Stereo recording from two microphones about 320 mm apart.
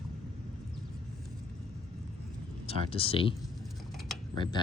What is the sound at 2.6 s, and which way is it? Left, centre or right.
Speech, centre.